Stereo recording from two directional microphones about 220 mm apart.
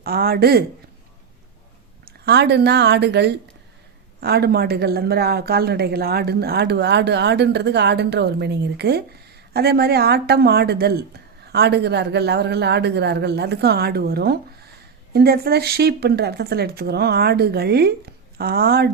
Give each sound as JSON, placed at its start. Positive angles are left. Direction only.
{"t": 0.0, "sound": "speech", "side_deg": -45}
{"t": 2.2, "sound": "speech", "side_deg": -50}